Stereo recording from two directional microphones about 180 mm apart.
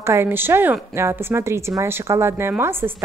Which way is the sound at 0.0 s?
15° right (ahead or behind).